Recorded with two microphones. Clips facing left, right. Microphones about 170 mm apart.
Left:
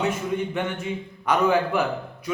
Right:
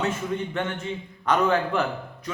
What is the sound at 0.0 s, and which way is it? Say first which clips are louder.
A man's voice: left 2 dB; 10° left (ahead or behind).